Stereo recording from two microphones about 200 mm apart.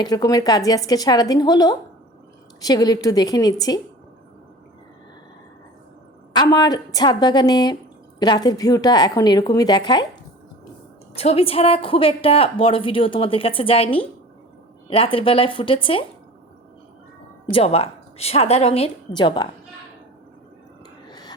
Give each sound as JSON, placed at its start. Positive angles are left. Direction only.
{"t": 0.0, "sound": "a woman's voice", "side_deg": 20}
{"t": 6.3, "sound": "a woman's voice", "side_deg": 20}
{"t": 11.1, "sound": "a woman's voice", "side_deg": 30}
{"t": 17.5, "sound": "a woman's voice", "side_deg": 30}
{"t": 21.1, "sound": "whispering", "side_deg": 20}